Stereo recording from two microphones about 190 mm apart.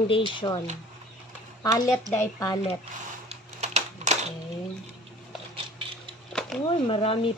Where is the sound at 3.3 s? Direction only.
35° right (ahead or behind).